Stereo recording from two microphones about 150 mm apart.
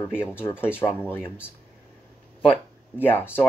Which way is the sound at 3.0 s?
15° left (ahead or behind).